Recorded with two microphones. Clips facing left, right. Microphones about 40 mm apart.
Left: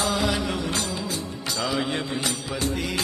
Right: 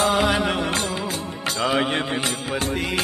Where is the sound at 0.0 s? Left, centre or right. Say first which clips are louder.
Right 5 dB; right.